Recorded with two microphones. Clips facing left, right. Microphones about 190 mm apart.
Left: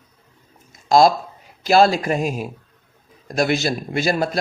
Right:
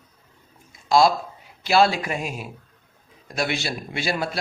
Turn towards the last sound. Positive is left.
turn(degrees=40)  # may be behind; listen again after turning